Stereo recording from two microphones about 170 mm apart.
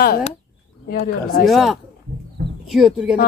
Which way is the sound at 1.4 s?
Centre (ahead or behind).